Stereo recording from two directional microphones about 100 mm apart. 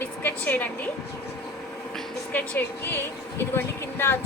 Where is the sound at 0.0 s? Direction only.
20° left (ahead or behind).